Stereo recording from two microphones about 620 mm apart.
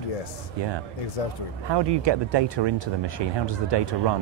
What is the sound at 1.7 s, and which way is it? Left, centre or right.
Speech, right.